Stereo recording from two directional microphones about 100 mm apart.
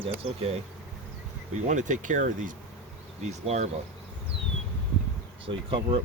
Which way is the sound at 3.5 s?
90° right.